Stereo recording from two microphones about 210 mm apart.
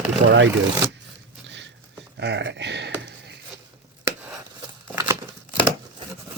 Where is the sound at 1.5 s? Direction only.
60° right (ahead or behind).